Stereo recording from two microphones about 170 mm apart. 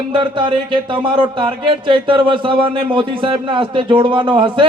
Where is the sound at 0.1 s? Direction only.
30° right (ahead or behind).